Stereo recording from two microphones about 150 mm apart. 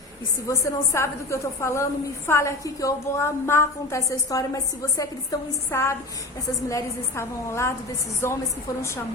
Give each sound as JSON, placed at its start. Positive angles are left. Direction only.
{"t": 0.4, "sound": "a woman's voice", "side_deg": 20}